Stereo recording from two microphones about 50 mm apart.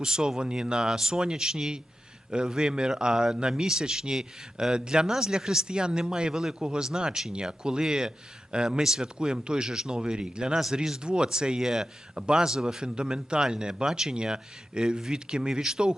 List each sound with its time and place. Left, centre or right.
0.0 s speech: centre